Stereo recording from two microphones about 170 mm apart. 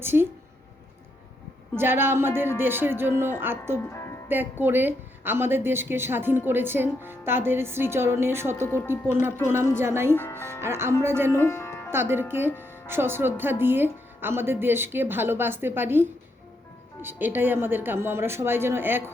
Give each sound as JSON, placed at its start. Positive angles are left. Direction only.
{"t": 0.0, "sound": "a woman's voice", "side_deg": -15}
{"t": 1.7, "sound": "a woman's voice", "side_deg": -15}
{"t": 3.8, "sound": "music", "side_deg": 15}
{"t": 4.6, "sound": "a woman's voice", "side_deg": -10}
{"t": 8.6, "sound": "speech", "side_deg": 15}
{"t": 9.7, "sound": "a woman's voice", "side_deg": -15}
{"t": 11.3, "sound": "speech", "side_deg": 15}
{"t": 11.9, "sound": "a woman's voice", "side_deg": -15}